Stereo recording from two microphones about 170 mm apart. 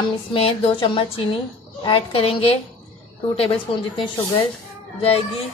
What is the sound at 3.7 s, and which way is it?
Speech, 35° left (ahead or behind).